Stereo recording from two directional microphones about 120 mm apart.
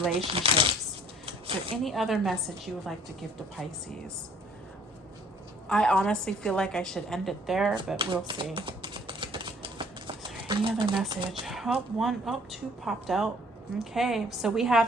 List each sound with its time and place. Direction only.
0.1 s speech: 50° right (ahead or behind)
1.2 s a sound: 50° right (ahead or behind)
1.7 s a woman's voice: centre (ahead or behind)
5.6 s a woman's voice: 5° left (ahead or behind)
7.9 s speech: 45° right (ahead or behind)
8.5 s a sound: 40° right (ahead or behind)
11.3 s a woman's voice: centre (ahead or behind)